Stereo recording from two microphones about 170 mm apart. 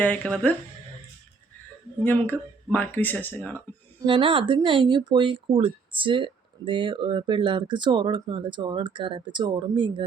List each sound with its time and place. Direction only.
0.0 s speech: 10° left (ahead or behind)
2.0 s speech: 10° left (ahead or behind)
4.0 s speech: 30° right (ahead or behind)